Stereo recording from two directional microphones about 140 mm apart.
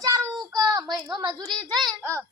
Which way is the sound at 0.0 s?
25° right (ahead or behind).